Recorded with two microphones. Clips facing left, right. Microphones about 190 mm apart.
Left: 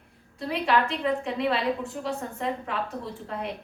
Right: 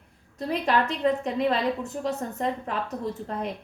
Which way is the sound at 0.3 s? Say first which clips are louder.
Even; 40° right (ahead or behind).